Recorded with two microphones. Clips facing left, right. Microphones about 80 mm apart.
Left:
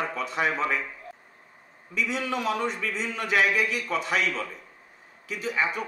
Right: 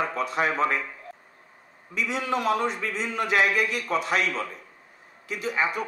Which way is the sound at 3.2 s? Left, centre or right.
Right.